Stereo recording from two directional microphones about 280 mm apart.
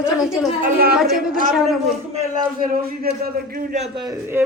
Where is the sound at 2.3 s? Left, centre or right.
Right; by 4.4 s centre.